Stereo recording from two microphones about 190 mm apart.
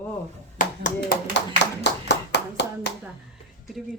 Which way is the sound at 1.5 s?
65° left (ahead or behind).